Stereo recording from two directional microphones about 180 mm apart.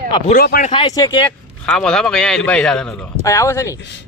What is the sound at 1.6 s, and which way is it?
A man's voice, 5° left (ahead or behind).